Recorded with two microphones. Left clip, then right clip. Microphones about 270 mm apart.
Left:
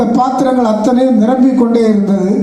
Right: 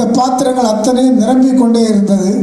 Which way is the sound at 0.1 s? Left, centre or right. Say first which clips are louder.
Even; right.